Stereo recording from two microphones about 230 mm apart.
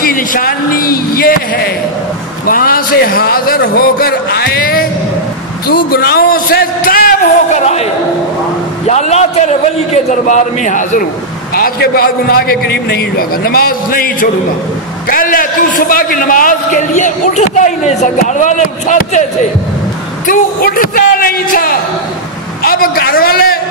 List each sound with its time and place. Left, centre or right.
0.0 s a man's voice: left
20.2 s a man's voice: left